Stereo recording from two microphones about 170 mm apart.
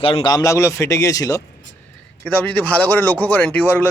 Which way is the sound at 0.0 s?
30° left (ahead or behind).